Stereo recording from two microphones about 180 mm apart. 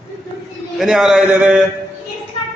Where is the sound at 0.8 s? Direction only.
Centre (ahead or behind).